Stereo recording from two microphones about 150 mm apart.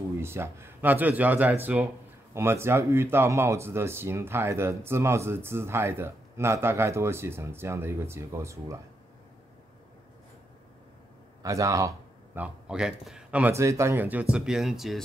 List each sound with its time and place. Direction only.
0.2 s speech: 15° right (ahead or behind)
11.4 s speech: 20° right (ahead or behind)
12.4 s speech: 5° right (ahead or behind)